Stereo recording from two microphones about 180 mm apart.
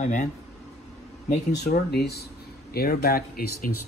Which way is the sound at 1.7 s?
60° left (ahead or behind).